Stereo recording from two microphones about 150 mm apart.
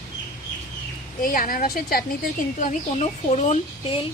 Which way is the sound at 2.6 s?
55° left (ahead or behind).